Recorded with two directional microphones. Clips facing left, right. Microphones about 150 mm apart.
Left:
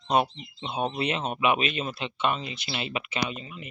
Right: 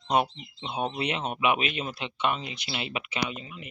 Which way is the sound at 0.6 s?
10° right (ahead or behind).